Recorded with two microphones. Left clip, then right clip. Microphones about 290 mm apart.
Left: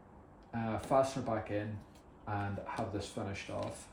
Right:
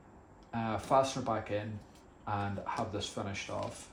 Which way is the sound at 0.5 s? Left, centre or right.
Centre.